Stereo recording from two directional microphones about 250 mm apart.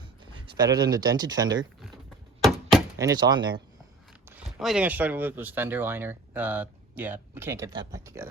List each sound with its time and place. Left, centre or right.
0.3 s speech: centre
2.4 s a sound: centre
3.0 s speech: centre
4.3 s speech: centre